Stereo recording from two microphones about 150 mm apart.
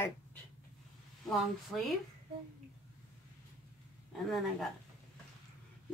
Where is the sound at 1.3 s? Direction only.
Centre (ahead or behind).